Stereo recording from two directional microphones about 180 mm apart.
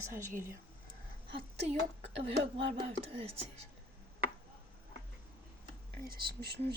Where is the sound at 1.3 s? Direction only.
35° right (ahead or behind).